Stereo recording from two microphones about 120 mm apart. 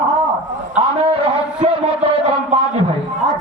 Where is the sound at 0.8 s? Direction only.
50° right (ahead or behind).